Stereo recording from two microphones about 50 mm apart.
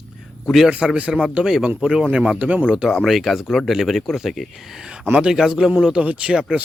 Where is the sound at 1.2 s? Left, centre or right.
Centre.